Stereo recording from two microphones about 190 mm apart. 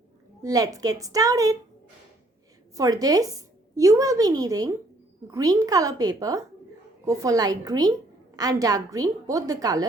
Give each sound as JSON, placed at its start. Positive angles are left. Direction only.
{"t": 0.4, "sound": "a woman's voice", "side_deg": -20}
{"t": 2.7, "sound": "a woman's voice", "side_deg": -20}